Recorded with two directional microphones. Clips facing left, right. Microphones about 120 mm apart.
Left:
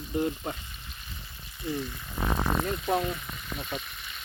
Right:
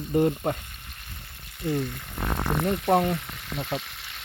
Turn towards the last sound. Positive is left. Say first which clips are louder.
# right 4 dB
turn(degrees=-75)  # may be behind; listen again after turning